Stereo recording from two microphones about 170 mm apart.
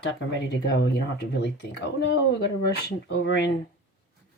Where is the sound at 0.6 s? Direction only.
75° left (ahead or behind).